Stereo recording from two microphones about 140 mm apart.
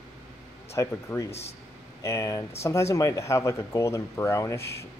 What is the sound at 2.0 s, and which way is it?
Speech, 25° left (ahead or behind).